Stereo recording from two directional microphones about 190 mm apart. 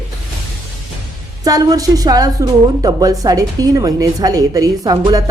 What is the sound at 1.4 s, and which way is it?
A woman's voice, 20° right (ahead or behind).